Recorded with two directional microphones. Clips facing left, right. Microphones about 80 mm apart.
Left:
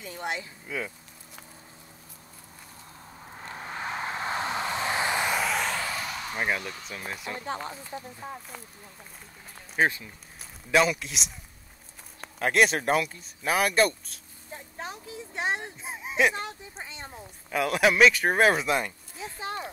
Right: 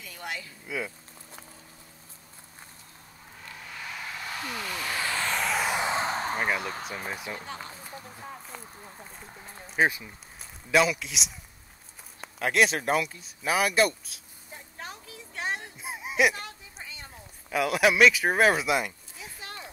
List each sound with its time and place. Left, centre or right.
0.0 s speech: left
0.7 s speech: centre
3.3 s vehicle: left; by 5.4 s centre
5.4 s a sound: centre
5.7 s a sound: right
6.6 s speech: right
7.3 s speech: left
9.8 s a man's voice: centre
14.8 s a sound: left
15.8 s speech: centre
16.3 s speech: left
17.5 s speech: centre
19.4 s a sound: left